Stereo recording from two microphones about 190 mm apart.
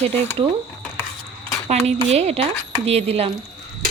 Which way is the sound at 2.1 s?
35° right (ahead or behind).